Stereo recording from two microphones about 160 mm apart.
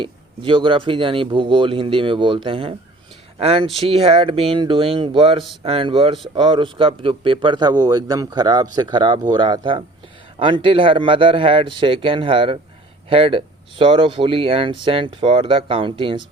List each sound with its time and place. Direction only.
0.0 s a man's voice: 30° right (ahead or behind)